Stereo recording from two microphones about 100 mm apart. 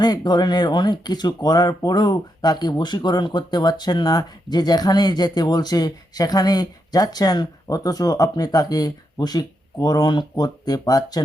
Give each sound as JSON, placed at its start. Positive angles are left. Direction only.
{"t": 0.0, "sound": "speech", "side_deg": 45}